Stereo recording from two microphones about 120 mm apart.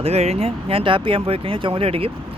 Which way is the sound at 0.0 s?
60° right (ahead or behind).